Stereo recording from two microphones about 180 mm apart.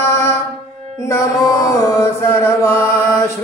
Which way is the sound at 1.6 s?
15° left (ahead or behind).